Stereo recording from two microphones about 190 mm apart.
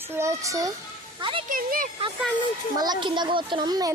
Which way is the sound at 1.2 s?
25° right (ahead or behind).